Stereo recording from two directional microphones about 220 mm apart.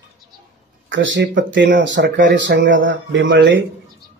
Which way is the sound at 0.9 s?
55° right (ahead or behind).